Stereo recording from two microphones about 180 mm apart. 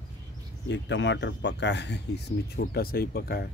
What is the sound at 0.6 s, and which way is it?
Speech, 80° left.